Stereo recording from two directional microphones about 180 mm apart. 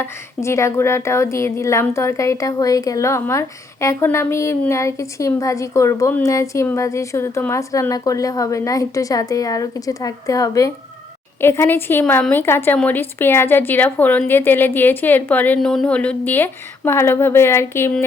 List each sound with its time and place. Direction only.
0.0 s speech: 15° left (ahead or behind)